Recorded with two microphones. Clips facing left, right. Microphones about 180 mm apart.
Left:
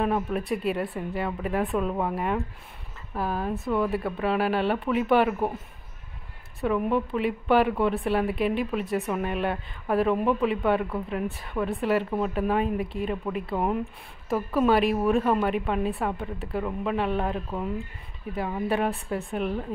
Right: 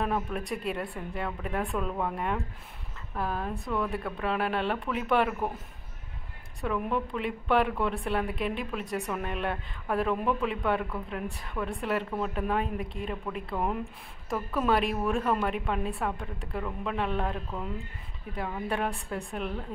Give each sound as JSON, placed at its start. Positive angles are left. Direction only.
{"t": 0.0, "sound": "a woman's voice", "side_deg": 5}
{"t": 6.6, "sound": "a woman's voice", "side_deg": 0}
{"t": 17.5, "sound": "speech", "side_deg": 15}
{"t": 18.7, "sound": "a woman's voice", "side_deg": 5}